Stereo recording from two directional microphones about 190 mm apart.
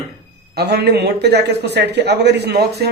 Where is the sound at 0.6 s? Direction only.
60° right (ahead or behind).